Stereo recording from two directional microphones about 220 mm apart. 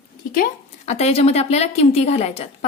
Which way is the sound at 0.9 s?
30° left (ahead or behind).